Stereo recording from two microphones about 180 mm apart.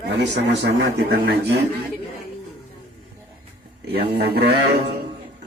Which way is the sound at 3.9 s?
60° right (ahead or behind).